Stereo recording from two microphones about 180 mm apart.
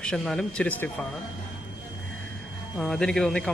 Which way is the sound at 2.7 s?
Centre (ahead or behind).